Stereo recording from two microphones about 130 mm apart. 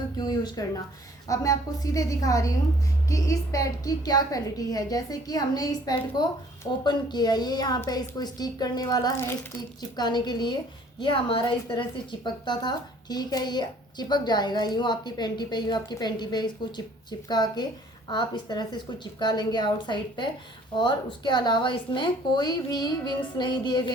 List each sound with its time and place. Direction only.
0.2 s a sound: 30° left (ahead or behind)
1.3 s a woman's voice: 25° left (ahead or behind)
9.1 s speech: 15° left (ahead or behind)
9.9 s a woman's voice: 35° left (ahead or behind)